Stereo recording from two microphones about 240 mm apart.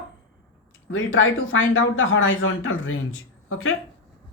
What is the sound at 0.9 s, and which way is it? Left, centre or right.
Speech, left.